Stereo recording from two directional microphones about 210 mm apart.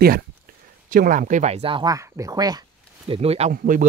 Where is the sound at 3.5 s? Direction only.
40° right (ahead or behind).